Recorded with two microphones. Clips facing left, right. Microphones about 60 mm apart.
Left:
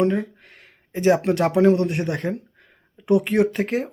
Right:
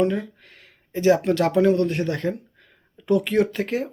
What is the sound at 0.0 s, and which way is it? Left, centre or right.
Speech, left.